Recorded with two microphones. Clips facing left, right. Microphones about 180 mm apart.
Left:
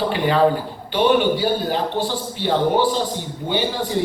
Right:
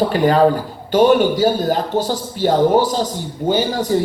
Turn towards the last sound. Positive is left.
turn(degrees=-40)  # may be behind; listen again after turning